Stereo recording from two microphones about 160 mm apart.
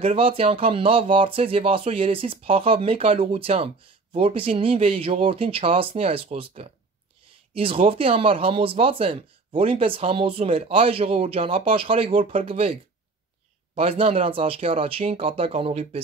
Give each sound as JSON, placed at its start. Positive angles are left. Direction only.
{"t": 0.0, "sound": "speech", "side_deg": -35}
{"t": 13.7, "sound": "speech", "side_deg": -35}